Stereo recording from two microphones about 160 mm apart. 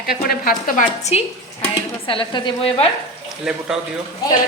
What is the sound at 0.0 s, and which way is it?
Speech, 70° left (ahead or behind).